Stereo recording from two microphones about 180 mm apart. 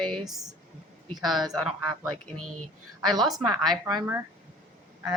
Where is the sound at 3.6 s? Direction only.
20° right (ahead or behind).